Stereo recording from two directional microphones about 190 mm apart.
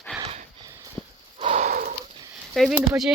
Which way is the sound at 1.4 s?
35° right (ahead or behind).